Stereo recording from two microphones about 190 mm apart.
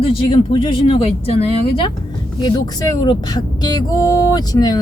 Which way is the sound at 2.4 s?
20° left (ahead or behind).